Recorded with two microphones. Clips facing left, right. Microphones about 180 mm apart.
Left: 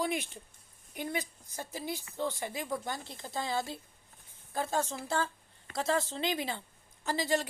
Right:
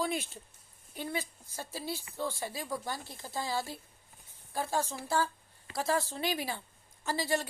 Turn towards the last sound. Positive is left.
turn(degrees=15)  # may be behind; listen again after turning